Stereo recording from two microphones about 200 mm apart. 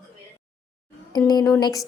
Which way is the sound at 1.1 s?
20° left (ahead or behind).